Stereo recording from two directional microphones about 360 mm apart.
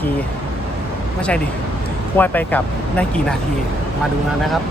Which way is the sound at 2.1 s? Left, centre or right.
Centre.